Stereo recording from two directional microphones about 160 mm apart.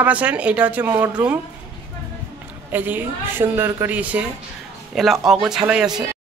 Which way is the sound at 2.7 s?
10° right (ahead or behind).